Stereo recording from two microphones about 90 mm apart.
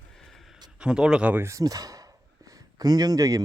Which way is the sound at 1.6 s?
40° right (ahead or behind).